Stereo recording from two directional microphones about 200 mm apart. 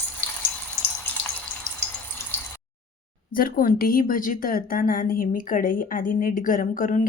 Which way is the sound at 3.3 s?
45° left (ahead or behind).